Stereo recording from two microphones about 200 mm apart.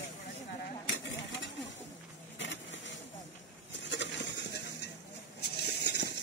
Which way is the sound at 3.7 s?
65° left (ahead or behind).